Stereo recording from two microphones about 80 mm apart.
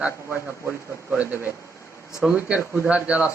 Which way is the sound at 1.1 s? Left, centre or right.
Right.